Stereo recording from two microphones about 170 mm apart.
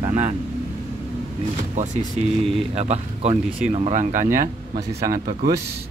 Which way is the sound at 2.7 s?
40° right (ahead or behind).